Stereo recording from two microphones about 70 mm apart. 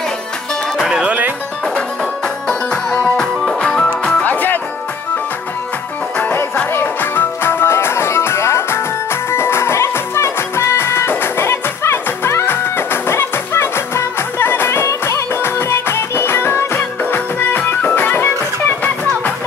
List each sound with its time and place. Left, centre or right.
0.7 s music: centre
2.4 s music: centre
4.2 s music: left
6.1 s music: left